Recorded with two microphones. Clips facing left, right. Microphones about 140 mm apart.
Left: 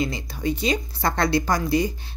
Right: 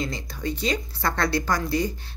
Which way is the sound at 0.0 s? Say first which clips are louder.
Left 4 dB; 10° left (ahead or behind).